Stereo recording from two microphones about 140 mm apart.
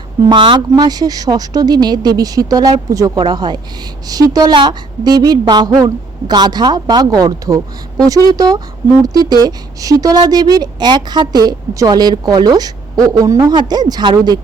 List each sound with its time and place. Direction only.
0.3 s speech: 35° right (ahead or behind)